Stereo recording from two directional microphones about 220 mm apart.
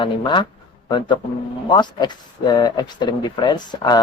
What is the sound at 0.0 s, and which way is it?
Speech, 20° left (ahead or behind).